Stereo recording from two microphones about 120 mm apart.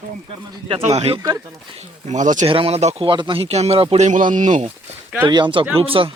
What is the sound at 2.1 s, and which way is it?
Speech, 90° right.